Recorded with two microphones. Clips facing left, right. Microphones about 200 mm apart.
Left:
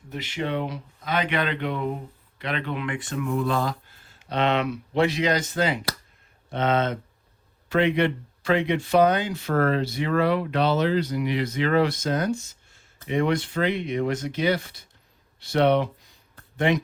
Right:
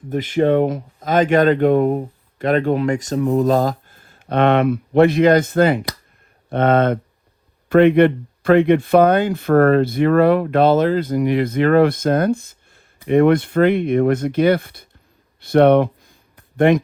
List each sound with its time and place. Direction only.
0.1 s speech: 50° right (ahead or behind)